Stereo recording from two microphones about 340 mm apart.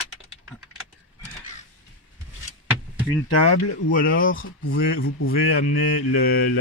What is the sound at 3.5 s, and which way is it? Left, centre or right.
Speech, left.